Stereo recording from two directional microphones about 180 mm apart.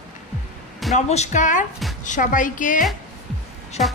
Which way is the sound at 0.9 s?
40° left (ahead or behind).